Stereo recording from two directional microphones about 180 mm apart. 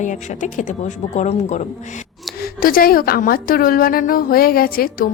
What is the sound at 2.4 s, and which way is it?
A woman's voice, 55° left (ahead or behind).